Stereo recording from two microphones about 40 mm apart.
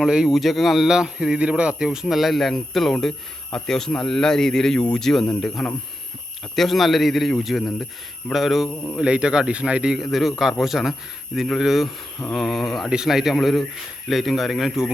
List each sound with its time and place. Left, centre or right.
0.0 s speech: centre
0.3 s speech: centre
0.9 s speech: centre
2.1 s speech: centre
8.7 s a man's voice: left
9.0 s speech: right
9.9 s a man's voice: centre